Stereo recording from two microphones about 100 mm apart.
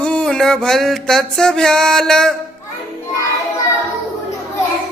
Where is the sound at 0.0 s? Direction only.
10° left (ahead or behind).